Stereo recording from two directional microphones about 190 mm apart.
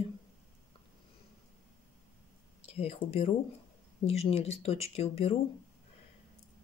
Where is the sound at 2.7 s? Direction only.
30° left (ahead or behind).